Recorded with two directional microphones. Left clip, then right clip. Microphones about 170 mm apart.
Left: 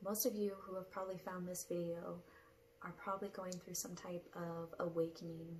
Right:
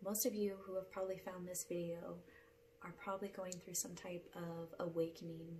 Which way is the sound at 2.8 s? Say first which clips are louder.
Left 1 dB; 15° right (ahead or behind).